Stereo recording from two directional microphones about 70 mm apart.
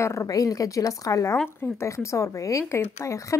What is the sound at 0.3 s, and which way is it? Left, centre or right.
A woman's voice, left.